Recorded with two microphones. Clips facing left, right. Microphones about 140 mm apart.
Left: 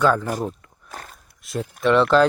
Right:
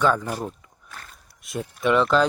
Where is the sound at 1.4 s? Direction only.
Centre (ahead or behind).